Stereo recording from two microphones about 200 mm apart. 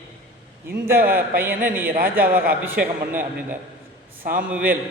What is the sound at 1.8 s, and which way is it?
Speech, 45° right (ahead or behind).